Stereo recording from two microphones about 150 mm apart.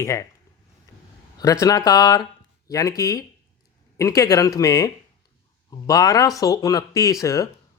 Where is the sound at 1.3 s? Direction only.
20° left (ahead or behind).